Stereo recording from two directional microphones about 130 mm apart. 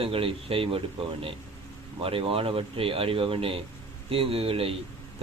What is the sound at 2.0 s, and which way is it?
Speech, 45° right (ahead or behind).